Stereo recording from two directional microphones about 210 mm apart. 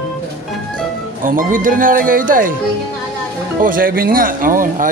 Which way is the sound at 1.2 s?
40° right (ahead or behind).